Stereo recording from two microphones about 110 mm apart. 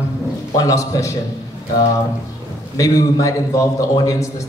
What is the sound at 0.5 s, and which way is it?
Speech, 30° left (ahead or behind).